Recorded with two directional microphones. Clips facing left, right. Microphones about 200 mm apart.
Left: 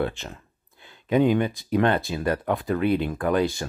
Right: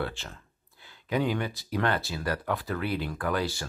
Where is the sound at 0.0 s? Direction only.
20° left (ahead or behind).